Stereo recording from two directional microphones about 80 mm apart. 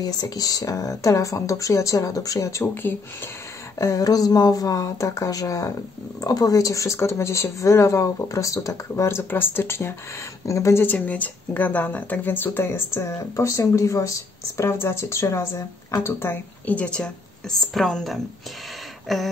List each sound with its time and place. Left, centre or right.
0.0 s speech: left
2.6 s speech: left
3.7 s speech: left
10.4 s speech: left
10.9 s speech: centre; by 14.1 s left
14.6 s speech: left
16.7 s a woman's voice: centre
19.1 s a sound: centre